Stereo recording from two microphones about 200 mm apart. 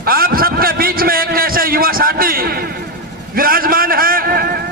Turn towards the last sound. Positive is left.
turn(degrees=-50)  # may be behind; listen again after turning